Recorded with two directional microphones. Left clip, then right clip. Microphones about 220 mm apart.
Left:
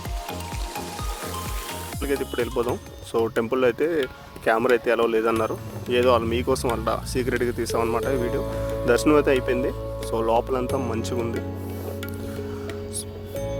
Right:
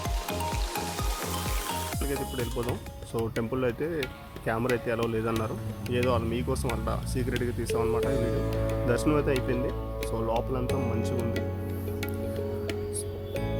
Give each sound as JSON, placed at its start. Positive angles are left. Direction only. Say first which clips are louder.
{"t": 2.0, "sound": "speech", "louder": "left 7 dB", "side_deg": 40}